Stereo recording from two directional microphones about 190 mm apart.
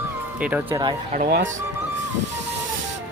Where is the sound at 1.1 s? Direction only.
45° right (ahead or behind).